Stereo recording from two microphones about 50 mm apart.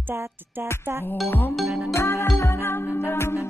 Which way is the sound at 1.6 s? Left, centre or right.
Centre.